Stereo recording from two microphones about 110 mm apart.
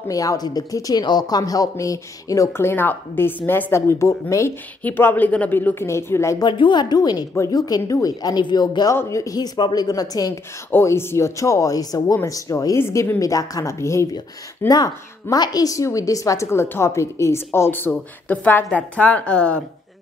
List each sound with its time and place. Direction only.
0.1 s a woman's voice: 30° left (ahead or behind)
6.4 s speech: 45° left (ahead or behind)
8.9 s speech: 30° left (ahead or behind)
10.7 s a woman's voice: 20° left (ahead or behind)
14.7 s a woman's voice: 35° left (ahead or behind); by 19.6 s 10° left (ahead or behind)